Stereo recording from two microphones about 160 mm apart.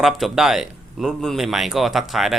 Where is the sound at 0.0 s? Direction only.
Centre (ahead or behind).